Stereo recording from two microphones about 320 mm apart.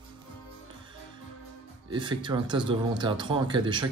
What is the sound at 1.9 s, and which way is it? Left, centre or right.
Speech, centre.